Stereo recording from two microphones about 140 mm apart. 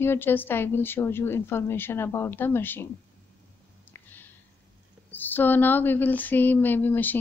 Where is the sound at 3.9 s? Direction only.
15° left (ahead or behind).